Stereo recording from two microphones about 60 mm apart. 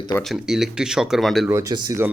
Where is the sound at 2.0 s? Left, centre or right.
Right.